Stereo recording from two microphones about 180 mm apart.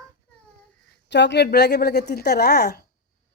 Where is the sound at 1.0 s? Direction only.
75° left (ahead or behind).